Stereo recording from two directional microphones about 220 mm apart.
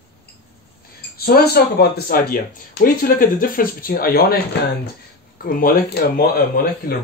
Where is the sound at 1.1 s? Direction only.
45° left (ahead or behind).